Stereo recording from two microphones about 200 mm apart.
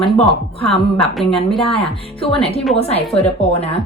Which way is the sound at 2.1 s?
30° left (ahead or behind).